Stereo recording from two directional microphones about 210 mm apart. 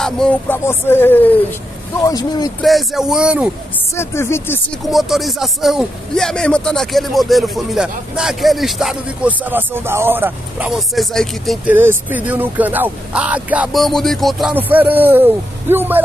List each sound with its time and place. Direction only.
0.0 s speech: 5° left (ahead or behind)
2.6 s a man's voice: centre (ahead or behind)
3.9 s speech: 10° left (ahead or behind)
4.8 s a man's voice: centre (ahead or behind)